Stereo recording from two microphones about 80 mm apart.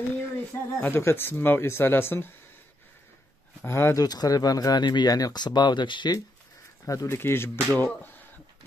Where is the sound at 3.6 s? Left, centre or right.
Left.